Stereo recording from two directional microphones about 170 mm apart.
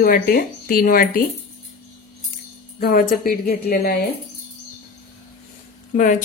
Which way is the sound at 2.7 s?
65° left (ahead or behind).